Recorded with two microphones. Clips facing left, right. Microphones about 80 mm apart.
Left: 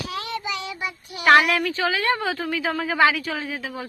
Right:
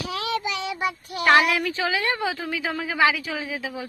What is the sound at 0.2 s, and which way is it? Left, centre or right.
Child singing, right.